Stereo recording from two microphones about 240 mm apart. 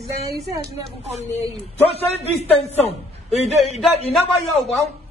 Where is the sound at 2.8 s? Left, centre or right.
Left.